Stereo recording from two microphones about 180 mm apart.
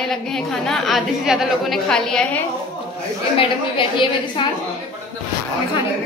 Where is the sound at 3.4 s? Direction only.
30° left (ahead or behind).